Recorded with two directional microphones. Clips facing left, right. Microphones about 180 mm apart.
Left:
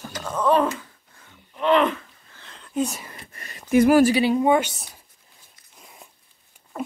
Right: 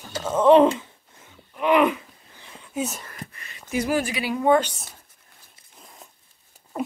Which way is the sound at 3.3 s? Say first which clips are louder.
Left 10 dB; 45° left (ahead or behind).